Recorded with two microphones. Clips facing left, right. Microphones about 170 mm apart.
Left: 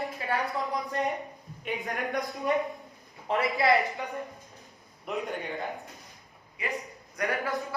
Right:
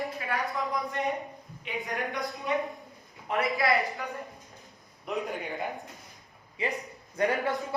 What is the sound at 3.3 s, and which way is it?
Speech, 30° left (ahead or behind).